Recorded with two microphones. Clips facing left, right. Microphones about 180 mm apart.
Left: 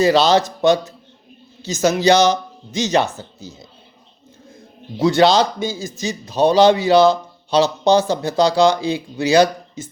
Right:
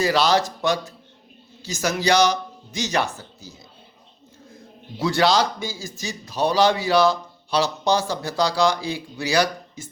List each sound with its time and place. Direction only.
0.0 s speech: 25° left (ahead or behind)
4.9 s speech: 20° left (ahead or behind)